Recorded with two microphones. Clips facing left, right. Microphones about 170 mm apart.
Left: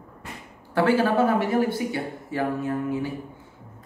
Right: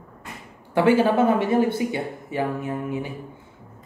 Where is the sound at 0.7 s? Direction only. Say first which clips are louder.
Right 3 dB; 20° right (ahead or behind).